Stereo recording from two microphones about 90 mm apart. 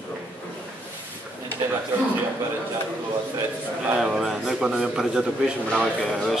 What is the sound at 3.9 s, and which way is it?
A man's voice, 5° right (ahead or behind).